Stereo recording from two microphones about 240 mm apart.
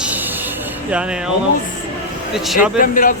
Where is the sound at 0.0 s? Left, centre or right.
Centre.